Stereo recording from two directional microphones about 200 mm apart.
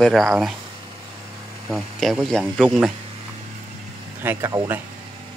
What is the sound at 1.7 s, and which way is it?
Speech, centre (ahead or behind).